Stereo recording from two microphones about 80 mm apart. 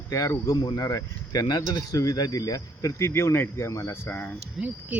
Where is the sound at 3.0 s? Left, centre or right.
Left.